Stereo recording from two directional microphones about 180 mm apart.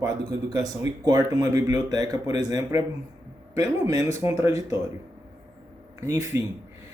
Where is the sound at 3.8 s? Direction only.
20° right (ahead or behind).